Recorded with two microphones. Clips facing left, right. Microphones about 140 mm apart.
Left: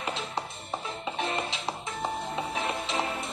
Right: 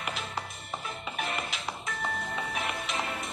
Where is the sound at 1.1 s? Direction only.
30° left (ahead or behind).